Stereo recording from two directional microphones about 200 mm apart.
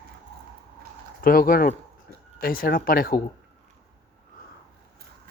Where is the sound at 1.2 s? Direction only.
45° left (ahead or behind).